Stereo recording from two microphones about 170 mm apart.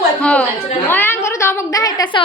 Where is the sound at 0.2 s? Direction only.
5° left (ahead or behind).